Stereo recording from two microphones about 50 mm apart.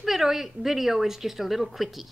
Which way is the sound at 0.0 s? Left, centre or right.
Centre.